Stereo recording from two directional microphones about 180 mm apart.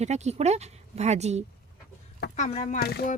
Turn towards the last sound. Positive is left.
turn(degrees=60)  # may be behind; listen again after turning